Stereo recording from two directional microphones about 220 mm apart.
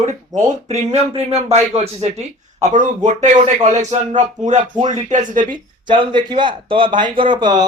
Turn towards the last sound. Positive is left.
turn(degrees=-20)  # may be behind; listen again after turning